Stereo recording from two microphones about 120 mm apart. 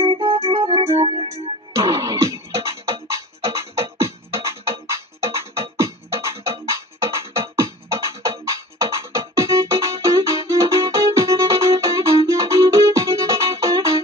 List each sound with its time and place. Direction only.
0.0 s music: 45° right (ahead or behind)
1.8 s music: 30° right (ahead or behind)
5.2 s music: 20° right (ahead or behind)